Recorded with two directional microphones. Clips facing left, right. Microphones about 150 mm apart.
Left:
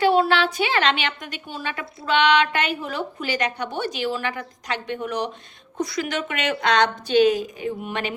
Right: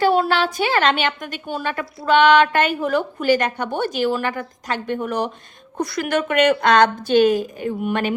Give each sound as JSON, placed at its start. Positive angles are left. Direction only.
{"t": 0.0, "sound": "a woman's voice", "side_deg": -45}